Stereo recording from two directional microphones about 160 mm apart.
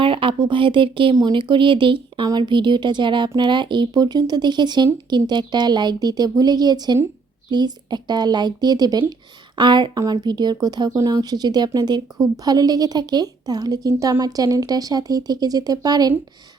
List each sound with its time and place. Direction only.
0.0 s a woman's voice: 35° right (ahead or behind)